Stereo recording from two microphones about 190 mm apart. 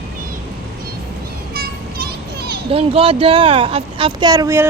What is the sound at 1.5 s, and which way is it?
Children playing, 55° right (ahead or behind).